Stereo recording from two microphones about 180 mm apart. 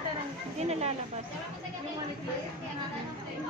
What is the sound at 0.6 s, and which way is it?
Speech, 35° right (ahead or behind).